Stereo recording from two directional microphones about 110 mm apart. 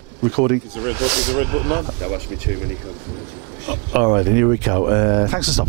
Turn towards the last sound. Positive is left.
turn(degrees=-10)  # may be behind; listen again after turning